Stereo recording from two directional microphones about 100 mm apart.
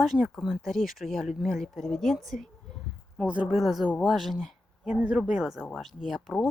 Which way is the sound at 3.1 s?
10° right (ahead or behind).